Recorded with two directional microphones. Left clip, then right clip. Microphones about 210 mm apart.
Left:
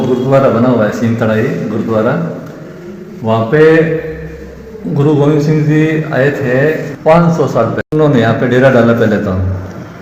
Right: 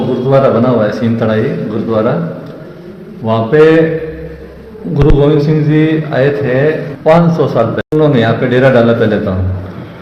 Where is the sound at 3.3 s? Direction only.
10° right (ahead or behind).